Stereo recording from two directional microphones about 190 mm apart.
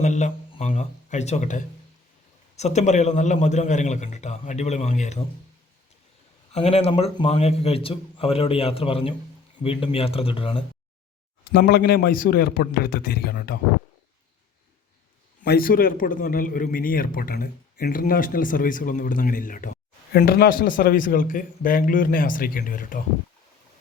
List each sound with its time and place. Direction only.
0.0 s a sound: 40° left (ahead or behind)
0.7 s a man's voice: 35° left (ahead or behind)
6.5 s a man's voice: 30° left (ahead or behind)
11.5 s a man's voice: 50° left (ahead or behind)
15.4 s a man's voice: 50° left (ahead or behind)